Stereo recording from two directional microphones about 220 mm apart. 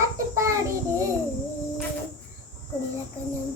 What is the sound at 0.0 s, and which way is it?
Child singing, 15° right (ahead or behind).